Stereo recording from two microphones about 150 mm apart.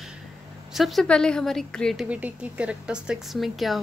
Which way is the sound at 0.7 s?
Centre (ahead or behind).